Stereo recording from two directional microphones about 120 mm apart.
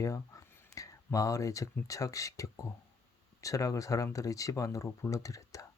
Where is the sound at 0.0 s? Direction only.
25° left (ahead or behind).